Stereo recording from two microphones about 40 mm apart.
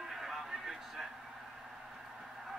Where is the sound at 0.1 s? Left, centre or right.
Centre.